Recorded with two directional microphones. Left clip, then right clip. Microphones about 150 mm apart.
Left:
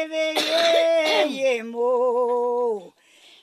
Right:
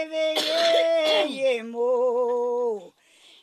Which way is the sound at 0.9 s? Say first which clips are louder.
Left 2 dB; 10° left (ahead or behind).